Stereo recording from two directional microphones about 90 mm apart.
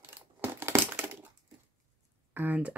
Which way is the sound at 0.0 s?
25° right (ahead or behind).